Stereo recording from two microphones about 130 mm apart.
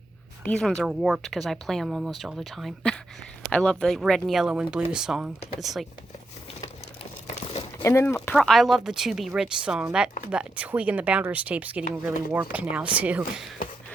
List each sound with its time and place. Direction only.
0.4 s speech: 5° left (ahead or behind)
7.3 s crumpling: 50° left (ahead or behind)
7.8 s speech: 20° left (ahead or behind)
8.3 s speech: centre (ahead or behind)